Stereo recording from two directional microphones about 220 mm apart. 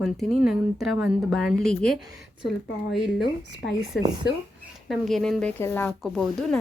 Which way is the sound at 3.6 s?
45° left (ahead or behind).